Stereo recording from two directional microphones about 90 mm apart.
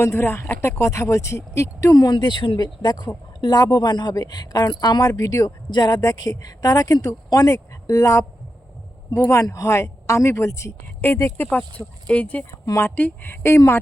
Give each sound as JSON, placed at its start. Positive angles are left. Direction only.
{"t": 0.0, "sound": "speech", "side_deg": 25}
{"t": 5.7, "sound": "speech", "side_deg": 50}
{"t": 12.0, "sound": "speech", "side_deg": 15}